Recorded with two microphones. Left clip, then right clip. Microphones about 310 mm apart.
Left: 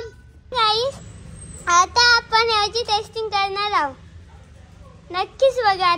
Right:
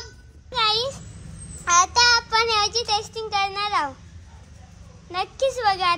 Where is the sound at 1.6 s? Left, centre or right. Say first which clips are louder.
Left 2 dB; centre.